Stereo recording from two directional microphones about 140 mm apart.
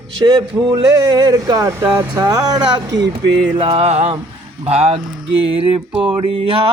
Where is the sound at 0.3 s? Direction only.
30° right (ahead or behind).